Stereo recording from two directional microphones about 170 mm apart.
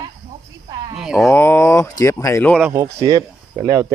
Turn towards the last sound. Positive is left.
turn(degrees=-20)  # may be behind; listen again after turning